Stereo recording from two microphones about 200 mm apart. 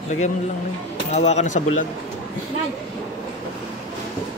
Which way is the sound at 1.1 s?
35° left (ahead or behind).